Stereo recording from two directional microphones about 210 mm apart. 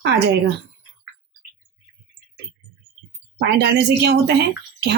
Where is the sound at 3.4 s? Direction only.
55° right (ahead or behind).